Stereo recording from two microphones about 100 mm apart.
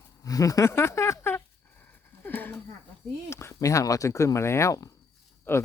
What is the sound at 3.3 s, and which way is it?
Speech, 30° left (ahead or behind).